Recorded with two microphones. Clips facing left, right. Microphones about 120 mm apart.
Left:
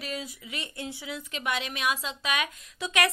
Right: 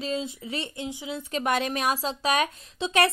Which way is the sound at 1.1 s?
40° right (ahead or behind).